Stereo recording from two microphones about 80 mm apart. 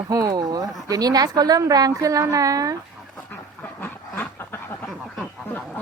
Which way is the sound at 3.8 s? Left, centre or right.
Left.